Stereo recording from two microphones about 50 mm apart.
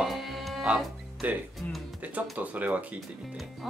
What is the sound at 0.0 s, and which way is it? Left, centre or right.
Music, centre.